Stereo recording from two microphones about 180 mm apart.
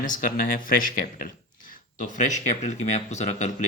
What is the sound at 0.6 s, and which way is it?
Speech, 50° left (ahead or behind).